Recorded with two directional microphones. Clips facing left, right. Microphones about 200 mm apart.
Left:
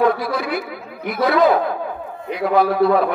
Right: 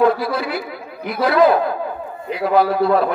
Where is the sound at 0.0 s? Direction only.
Centre (ahead or behind).